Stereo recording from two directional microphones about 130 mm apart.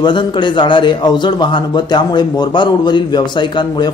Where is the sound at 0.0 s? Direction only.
35° left (ahead or behind).